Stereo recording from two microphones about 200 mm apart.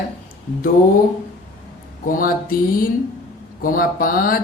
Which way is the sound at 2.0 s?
45° left (ahead or behind).